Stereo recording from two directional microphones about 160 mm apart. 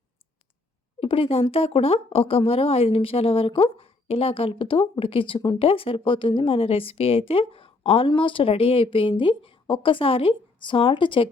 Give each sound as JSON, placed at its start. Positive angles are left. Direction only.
{"t": 0.9, "sound": "speech", "side_deg": 35}